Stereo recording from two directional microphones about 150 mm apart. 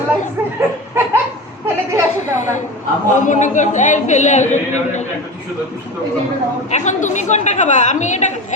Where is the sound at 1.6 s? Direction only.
20° right (ahead or behind).